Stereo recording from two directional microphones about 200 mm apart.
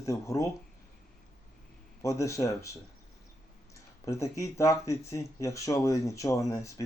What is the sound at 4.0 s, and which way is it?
Speech, 15° left (ahead or behind).